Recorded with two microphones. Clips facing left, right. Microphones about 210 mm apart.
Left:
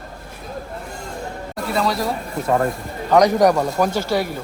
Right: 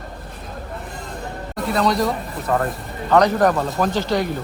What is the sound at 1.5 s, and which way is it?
Speech, centre (ahead or behind).